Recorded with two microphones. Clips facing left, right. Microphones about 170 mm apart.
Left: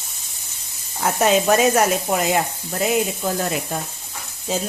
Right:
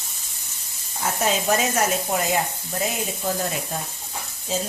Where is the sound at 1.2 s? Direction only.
70° left (ahead or behind).